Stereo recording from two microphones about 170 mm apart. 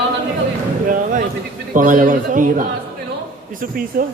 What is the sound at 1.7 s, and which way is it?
Speech, 55° right (ahead or behind).